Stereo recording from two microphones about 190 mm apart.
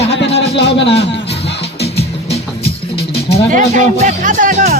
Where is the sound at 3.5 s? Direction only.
40° right (ahead or behind).